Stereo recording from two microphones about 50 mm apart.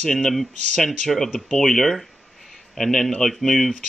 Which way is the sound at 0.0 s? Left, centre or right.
Centre.